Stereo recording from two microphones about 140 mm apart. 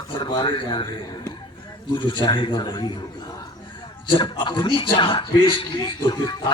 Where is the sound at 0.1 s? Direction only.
35° left (ahead or behind).